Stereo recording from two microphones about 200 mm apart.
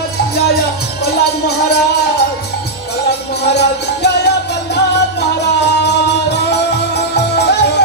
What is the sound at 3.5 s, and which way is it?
Music, 55° left (ahead or behind).